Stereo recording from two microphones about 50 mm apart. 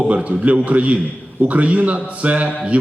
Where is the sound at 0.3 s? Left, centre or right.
Right.